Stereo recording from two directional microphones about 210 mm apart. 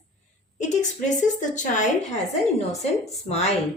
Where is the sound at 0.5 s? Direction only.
35° left (ahead or behind).